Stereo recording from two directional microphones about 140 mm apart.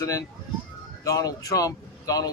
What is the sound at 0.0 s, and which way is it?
Speech, 25° left (ahead or behind).